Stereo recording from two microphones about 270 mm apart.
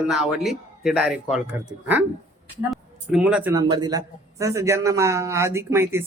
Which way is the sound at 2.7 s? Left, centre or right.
Centre.